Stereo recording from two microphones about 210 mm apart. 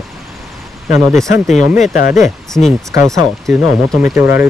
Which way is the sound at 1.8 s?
40° left (ahead or behind).